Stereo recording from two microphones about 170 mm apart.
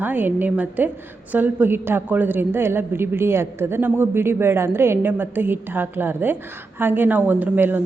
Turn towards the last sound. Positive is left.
turn(degrees=-10)  # may be behind; listen again after turning